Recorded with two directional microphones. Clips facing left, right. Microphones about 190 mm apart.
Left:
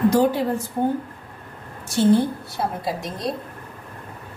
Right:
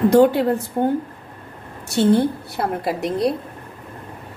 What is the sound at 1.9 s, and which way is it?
A woman's voice, 65° right (ahead or behind).